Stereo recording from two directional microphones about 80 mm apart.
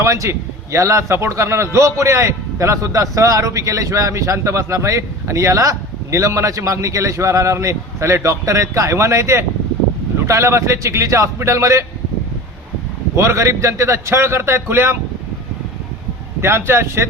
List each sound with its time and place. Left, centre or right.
0.0 s a man's voice: right
13.1 s a man's voice: right
16.4 s a man's voice: right